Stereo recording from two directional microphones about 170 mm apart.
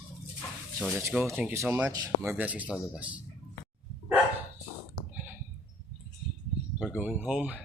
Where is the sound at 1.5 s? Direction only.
15° right (ahead or behind).